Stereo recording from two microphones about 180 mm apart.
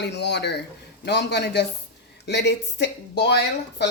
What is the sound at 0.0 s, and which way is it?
Speech, 70° left (ahead or behind).